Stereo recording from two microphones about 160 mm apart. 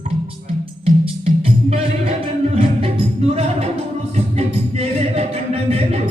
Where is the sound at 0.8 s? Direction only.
40° right (ahead or behind).